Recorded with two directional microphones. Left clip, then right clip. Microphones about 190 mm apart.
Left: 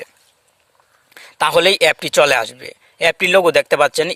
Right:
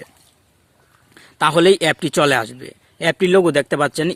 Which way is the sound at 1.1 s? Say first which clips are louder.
Left 1 dB; 30° left (ahead or behind).